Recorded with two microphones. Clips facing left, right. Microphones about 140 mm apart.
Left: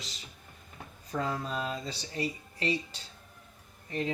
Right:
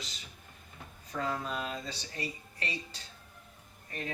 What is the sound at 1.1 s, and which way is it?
Speech, 35° left (ahead or behind).